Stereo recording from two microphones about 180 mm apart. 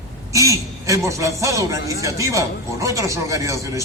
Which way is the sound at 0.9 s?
15° right (ahead or behind).